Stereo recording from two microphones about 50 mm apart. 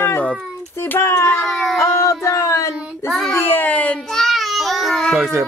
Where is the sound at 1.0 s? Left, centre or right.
Left.